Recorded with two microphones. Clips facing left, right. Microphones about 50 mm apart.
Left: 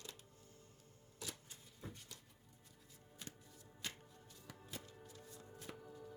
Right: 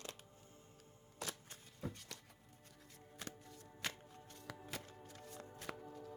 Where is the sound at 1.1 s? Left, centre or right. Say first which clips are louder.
Right 4 dB; right.